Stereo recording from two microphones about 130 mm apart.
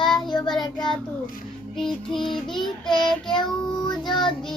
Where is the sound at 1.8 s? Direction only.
5° left (ahead or behind).